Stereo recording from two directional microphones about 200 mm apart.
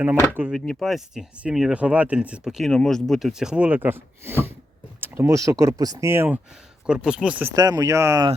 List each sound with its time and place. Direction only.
0.3 s speech: 5° right (ahead or behind)
0.6 s speech: 5° left (ahead or behind)
7.5 s speech: 20° right (ahead or behind)